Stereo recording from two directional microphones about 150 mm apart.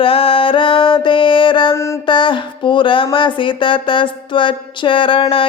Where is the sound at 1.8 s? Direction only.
20° left (ahead or behind).